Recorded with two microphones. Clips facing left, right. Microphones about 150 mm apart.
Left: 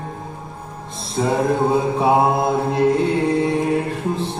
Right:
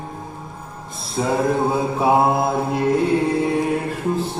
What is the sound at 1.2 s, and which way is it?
Music, 5° right (ahead or behind).